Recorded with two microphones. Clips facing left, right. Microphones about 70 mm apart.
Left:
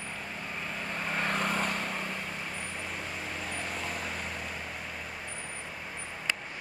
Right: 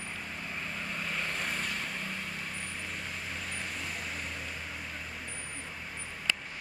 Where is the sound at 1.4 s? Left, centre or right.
Left.